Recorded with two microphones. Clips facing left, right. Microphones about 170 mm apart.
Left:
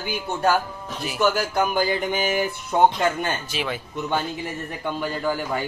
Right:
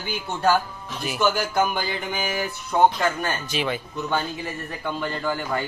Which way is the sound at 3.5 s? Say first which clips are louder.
Right 2 dB; 5° left (ahead or behind).